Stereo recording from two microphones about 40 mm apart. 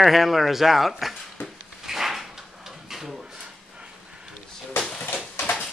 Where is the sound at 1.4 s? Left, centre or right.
Left.